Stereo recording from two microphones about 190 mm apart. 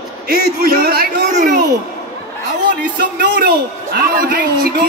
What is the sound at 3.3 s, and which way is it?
Speech, 50° right (ahead or behind).